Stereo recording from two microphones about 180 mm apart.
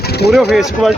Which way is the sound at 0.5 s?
Centre (ahead or behind).